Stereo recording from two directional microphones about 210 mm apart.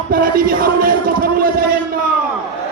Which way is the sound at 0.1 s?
45° right (ahead or behind).